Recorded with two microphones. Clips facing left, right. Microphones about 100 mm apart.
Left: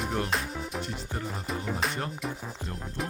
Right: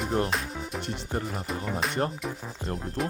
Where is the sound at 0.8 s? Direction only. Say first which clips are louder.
Right 1 dB; 65° right (ahead or behind).